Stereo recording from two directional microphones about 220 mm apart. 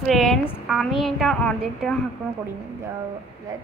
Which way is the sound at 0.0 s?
Centre (ahead or behind).